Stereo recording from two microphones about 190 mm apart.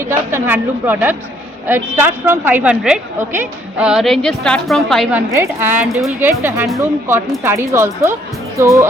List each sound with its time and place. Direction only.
0.3 s a woman's voice: 10° right (ahead or behind)
5.3 s speech: 10° right (ahead or behind)